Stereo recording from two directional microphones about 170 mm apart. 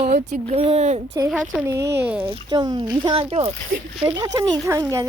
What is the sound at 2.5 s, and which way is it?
Speech, 25° right (ahead or behind).